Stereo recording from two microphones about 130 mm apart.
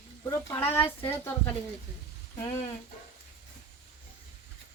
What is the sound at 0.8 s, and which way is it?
Speech, 20° left (ahead or behind).